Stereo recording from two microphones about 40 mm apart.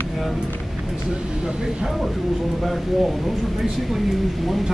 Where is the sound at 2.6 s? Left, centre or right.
Centre.